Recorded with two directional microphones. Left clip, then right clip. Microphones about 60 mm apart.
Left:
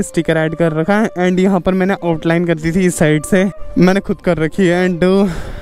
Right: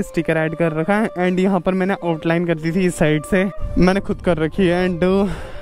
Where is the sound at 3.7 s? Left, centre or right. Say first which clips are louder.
Left 4 dB; left.